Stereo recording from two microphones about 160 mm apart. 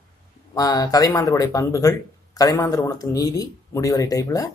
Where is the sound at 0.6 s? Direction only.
25° left (ahead or behind).